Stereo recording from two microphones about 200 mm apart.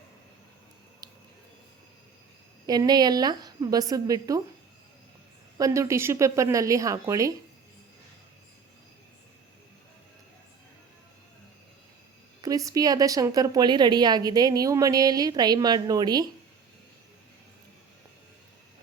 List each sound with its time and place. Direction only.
1.0 s a sound: 20° right (ahead or behind)
2.6 s a woman's voice: 20° right (ahead or behind)
5.5 s speech: 15° right (ahead or behind)
12.4 s a woman's voice: 15° right (ahead or behind)